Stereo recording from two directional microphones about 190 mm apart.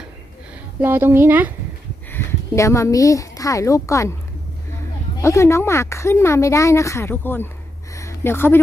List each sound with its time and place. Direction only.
0.8 s speech: 10° right (ahead or behind)
2.0 s speech: 15° left (ahead or behind)
5.2 s speech: 15° left (ahead or behind)
7.9 s a sound: 15° left (ahead or behind)